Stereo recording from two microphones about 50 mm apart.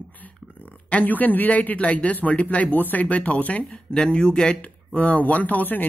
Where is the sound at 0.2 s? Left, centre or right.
Left.